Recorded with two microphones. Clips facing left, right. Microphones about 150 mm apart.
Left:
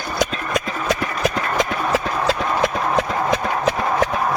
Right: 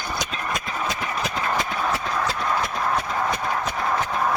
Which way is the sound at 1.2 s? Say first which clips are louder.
Left 7 dB; 90° left.